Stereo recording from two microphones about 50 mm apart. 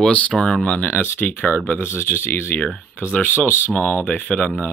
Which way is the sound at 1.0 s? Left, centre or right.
Left.